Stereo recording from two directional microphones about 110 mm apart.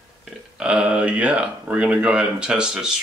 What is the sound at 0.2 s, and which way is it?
Speech, 10° right (ahead or behind).